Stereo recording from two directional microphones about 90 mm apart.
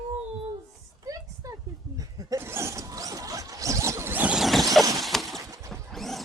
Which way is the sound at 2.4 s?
30° right (ahead or behind).